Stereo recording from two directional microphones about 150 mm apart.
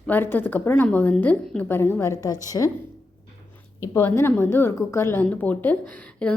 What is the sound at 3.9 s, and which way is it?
A woman's voice, 15° left (ahead or behind).